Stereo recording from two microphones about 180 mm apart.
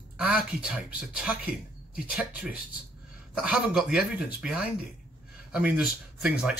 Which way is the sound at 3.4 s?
5° right (ahead or behind).